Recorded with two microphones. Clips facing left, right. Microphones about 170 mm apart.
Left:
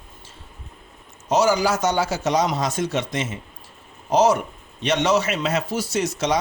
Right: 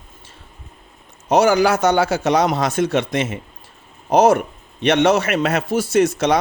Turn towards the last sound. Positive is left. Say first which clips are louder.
# right 7 dB
turn(degrees=-55)  # may be behind; listen again after turning